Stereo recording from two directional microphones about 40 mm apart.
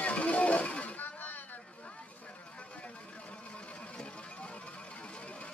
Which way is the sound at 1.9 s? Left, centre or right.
Left.